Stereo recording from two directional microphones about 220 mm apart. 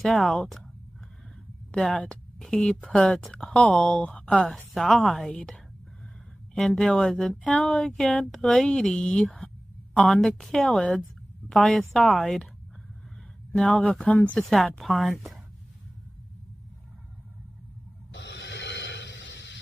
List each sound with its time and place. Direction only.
0.0 s a woman's voice: centre (ahead or behind)
1.7 s a woman's voice: 5° left (ahead or behind)
13.6 s a woman's voice: 5° left (ahead or behind)
18.1 s a sound: 55° left (ahead or behind)